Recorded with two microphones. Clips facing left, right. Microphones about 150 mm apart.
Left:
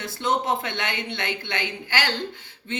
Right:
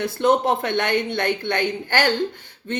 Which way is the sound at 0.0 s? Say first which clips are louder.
Right 7 dB; 55° right (ahead or behind).